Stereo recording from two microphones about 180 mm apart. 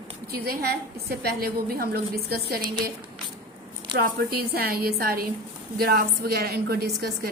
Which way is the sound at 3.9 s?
60° right (ahead or behind).